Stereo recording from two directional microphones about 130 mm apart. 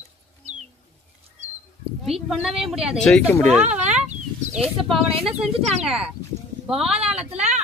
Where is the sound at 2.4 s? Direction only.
Centre (ahead or behind).